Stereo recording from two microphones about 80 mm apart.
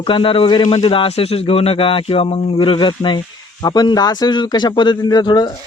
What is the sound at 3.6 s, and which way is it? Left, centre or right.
A man's voice, left.